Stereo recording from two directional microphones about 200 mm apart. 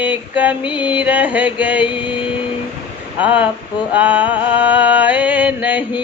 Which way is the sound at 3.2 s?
10° right (ahead or behind).